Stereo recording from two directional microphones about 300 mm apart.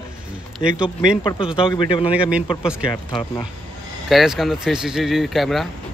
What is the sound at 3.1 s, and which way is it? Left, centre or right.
Speech, centre.